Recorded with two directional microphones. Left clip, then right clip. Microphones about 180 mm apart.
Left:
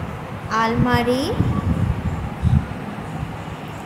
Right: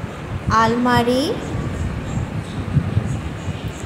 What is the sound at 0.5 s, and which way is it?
Speech, 20° right (ahead or behind).